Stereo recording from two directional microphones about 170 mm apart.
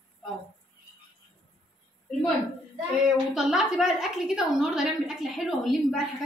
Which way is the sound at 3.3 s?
Centre (ahead or behind).